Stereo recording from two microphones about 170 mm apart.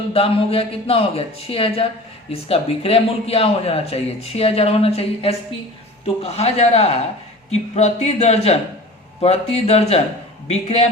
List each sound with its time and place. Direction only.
0.1 s speech: 35° left (ahead or behind)